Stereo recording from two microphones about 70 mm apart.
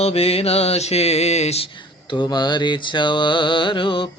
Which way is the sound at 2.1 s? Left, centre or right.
Left.